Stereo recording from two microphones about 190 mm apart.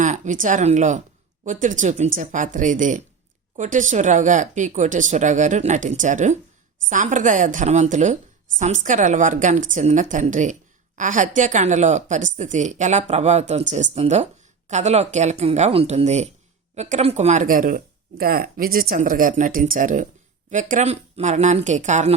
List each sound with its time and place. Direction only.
0.0 s a woman's voice: 40° right (ahead or behind)